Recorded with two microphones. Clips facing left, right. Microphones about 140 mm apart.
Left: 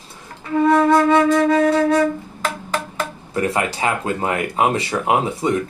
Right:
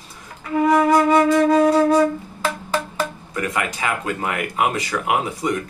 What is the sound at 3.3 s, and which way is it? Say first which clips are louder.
Speech: left 4 dB; 30° left (ahead or behind).